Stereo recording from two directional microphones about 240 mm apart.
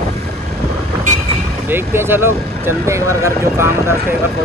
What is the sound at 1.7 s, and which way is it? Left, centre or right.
Speech, centre.